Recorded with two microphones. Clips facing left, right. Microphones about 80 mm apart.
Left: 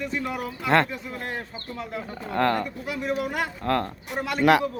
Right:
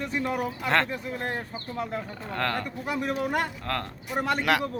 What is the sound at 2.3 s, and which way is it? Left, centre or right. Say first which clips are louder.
Speech: left 6 dB; centre.